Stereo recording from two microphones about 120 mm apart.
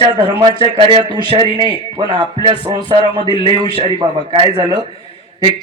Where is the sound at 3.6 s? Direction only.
50° left (ahead or behind).